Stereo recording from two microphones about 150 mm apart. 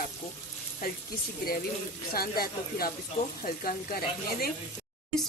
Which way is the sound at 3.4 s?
75° left (ahead or behind).